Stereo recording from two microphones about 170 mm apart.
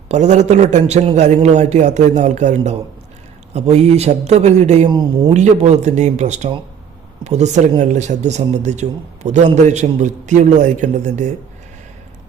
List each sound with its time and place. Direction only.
0.1 s a man's voice: 45° right (ahead or behind)
4.9 s speech: 25° right (ahead or behind)
5.3 s a man's voice: 40° right (ahead or behind)